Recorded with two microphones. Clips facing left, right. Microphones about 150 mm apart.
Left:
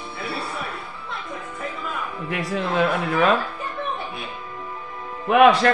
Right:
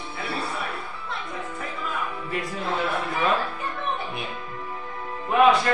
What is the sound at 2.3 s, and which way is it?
A man's voice, 75° left (ahead or behind).